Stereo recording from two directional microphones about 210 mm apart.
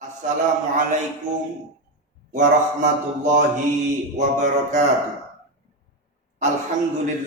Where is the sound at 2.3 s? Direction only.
35° right (ahead or behind).